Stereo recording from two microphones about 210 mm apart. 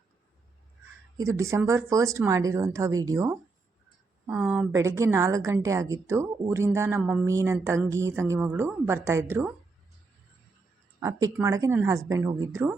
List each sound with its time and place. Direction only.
1.2 s a woman's voice: 15° right (ahead or behind)
4.3 s speech: 5° right (ahead or behind)
4.7 s a woman's voice: 15° right (ahead or behind)
11.0 s a woman's voice: 15° right (ahead or behind)